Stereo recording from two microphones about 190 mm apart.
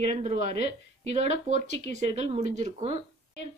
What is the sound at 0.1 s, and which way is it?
A woman's voice, 35° right (ahead or behind).